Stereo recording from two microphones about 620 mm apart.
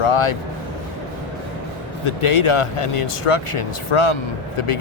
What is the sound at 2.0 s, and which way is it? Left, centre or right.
Speech, left.